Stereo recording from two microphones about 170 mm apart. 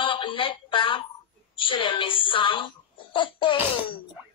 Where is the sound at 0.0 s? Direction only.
30° left (ahead or behind).